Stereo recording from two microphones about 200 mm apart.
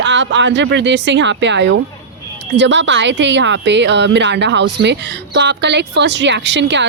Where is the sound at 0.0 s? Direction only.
65° right (ahead or behind).